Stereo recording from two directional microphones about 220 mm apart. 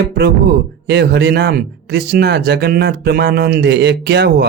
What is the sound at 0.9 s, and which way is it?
Speech, 50° right (ahead or behind).